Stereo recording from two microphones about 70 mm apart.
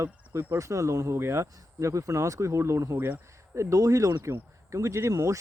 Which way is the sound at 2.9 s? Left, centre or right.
Right.